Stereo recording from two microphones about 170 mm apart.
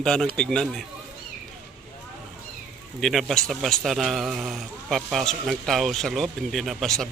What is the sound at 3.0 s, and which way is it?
Speech, centre (ahead or behind).